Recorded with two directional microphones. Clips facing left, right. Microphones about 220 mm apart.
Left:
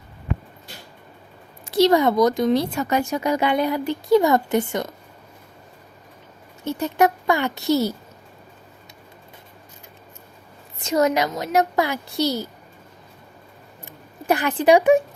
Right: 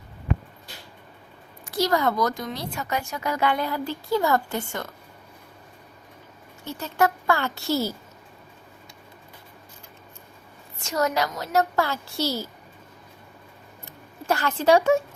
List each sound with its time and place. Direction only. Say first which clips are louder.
1.7 s speech: left 7 dB; 20° left (ahead or behind)
3.1 s speech: left 5 dB; 20° left (ahead or behind)
6.7 s speech: left 5 dB; 20° left (ahead or behind)
10.8 s speech: left 5 dB; 20° left (ahead or behind)
13.8 s speech: left 4 dB; 15° left (ahead or behind)